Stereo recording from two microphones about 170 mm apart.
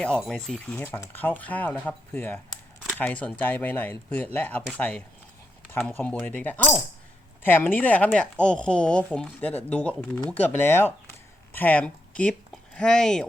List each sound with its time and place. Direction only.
0.0 s speech: 5° left (ahead or behind)